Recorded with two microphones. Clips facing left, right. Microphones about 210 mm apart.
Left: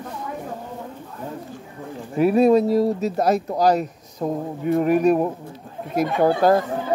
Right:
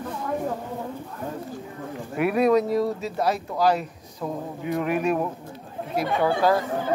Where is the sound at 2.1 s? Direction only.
30° left (ahead or behind); by 6.6 s 45° left (ahead or behind).